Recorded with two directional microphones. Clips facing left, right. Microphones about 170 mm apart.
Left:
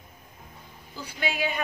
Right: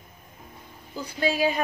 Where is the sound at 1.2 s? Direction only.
35° right (ahead or behind).